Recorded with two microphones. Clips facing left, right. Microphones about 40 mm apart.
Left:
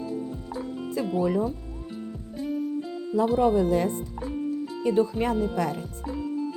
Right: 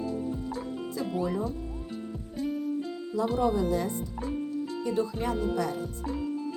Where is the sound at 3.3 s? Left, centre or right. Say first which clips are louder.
Left 4 dB; left.